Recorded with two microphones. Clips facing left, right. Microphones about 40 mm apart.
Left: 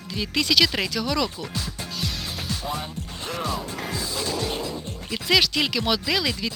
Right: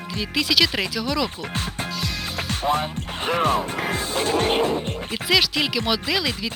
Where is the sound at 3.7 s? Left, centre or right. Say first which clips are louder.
Right 5 dB; right.